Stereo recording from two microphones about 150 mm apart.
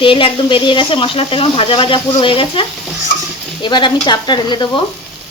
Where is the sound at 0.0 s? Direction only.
35° left (ahead or behind).